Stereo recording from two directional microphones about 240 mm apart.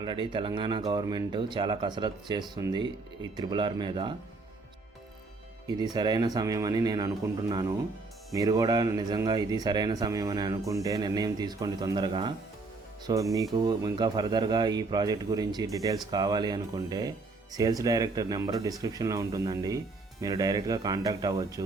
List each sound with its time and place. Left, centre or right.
0.0 s speech: centre
5.6 s speech: centre